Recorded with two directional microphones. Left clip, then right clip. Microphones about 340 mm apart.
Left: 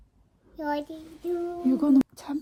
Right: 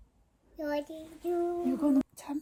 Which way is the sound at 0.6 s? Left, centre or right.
Centre.